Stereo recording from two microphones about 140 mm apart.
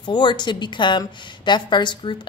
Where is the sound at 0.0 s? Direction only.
35° left (ahead or behind).